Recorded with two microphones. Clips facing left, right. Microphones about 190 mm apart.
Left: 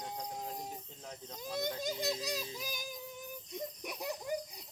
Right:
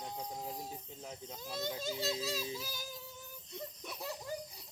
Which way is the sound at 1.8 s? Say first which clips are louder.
Left 1 dB; 15° left (ahead or behind).